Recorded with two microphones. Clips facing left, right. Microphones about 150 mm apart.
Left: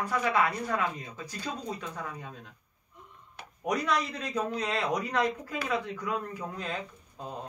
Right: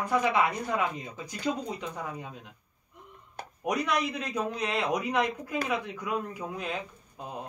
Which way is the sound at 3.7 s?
20° right (ahead or behind).